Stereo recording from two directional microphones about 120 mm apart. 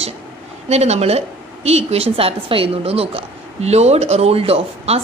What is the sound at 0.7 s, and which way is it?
A woman's voice, 65° right (ahead or behind).